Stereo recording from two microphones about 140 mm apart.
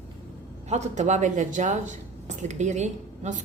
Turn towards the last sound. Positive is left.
turn(degrees=-55)  # may be behind; listen again after turning